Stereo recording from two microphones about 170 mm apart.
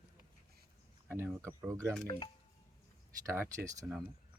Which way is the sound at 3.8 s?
5° right (ahead or behind).